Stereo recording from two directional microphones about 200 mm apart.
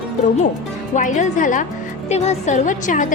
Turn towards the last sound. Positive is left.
turn(degrees=40)  # may be behind; listen again after turning